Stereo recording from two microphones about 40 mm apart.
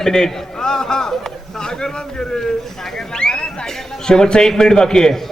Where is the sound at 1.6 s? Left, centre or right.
Centre.